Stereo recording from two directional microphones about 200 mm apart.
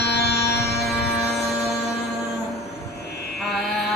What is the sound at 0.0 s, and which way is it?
Music, 55° left (ahead or behind).